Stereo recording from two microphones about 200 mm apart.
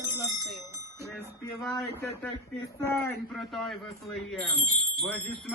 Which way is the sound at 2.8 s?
10° left (ahead or behind).